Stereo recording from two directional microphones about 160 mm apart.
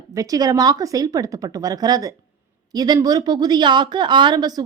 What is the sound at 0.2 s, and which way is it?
A woman's voice, 20° right (ahead or behind).